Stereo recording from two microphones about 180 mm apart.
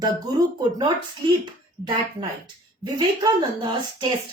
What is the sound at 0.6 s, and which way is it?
Speech, 25° right (ahead or behind).